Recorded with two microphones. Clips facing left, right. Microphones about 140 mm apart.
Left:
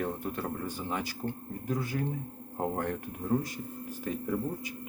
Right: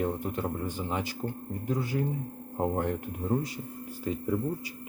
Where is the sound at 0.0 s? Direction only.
15° right (ahead or behind).